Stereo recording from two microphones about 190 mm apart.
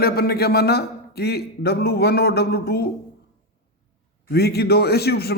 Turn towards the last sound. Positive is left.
turn(degrees=55)  # may be behind; listen again after turning